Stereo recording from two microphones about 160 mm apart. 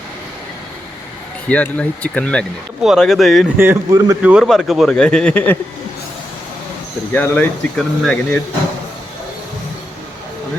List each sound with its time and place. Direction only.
1.5 s speech: 10° left (ahead or behind)
3.6 s speech: 15° right (ahead or behind)
4.2 s speech: 5° right (ahead or behind)
7.1 s speech: 10° left (ahead or behind)